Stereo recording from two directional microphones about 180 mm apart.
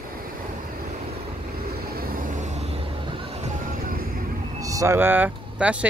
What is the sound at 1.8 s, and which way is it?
Vehicle, 55° right (ahead or behind).